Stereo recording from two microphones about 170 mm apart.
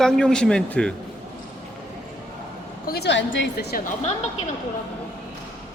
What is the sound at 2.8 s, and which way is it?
Speech, 70° left (ahead or behind).